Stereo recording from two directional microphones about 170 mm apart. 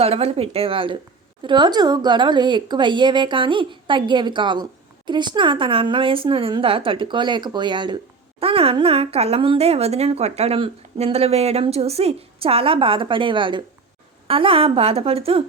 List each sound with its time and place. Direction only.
0.0 s a woman's voice: 35° right (ahead or behind)